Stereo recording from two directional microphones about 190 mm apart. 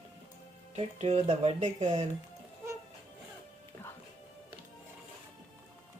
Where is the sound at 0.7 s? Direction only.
35° right (ahead or behind).